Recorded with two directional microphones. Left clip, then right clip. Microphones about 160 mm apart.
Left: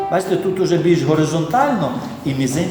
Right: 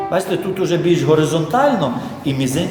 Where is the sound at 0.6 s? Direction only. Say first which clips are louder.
Right 1 dB; 25° right (ahead or behind).